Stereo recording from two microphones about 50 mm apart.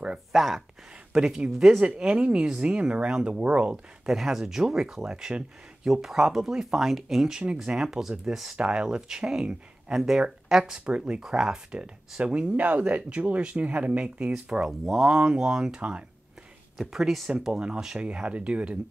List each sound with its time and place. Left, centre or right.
0.3 s speech: centre
1.1 s speech: centre
1.8 s speech: centre
3.7 s speech: centre
5.9 s speech: centre
10.7 s speech: right
11.2 s speech: centre
12.5 s speech: right
16.9 s speech: centre; by 18.8 s right